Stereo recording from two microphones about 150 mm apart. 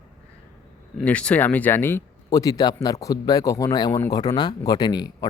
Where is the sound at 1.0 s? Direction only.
10° left (ahead or behind); by 5.3 s 25° left (ahead or behind).